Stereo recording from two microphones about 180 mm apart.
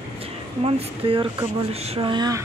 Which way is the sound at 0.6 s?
30° right (ahead or behind).